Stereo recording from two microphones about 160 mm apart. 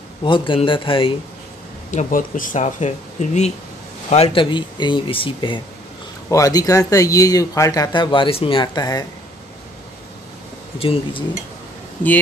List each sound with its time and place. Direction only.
0.2 s speech: 30° left (ahead or behind)
1.9 s speech: 55° left (ahead or behind); by 5.6 s 30° left (ahead or behind)
6.2 s speech: 20° left (ahead or behind)
10.8 s speech: 35° left (ahead or behind)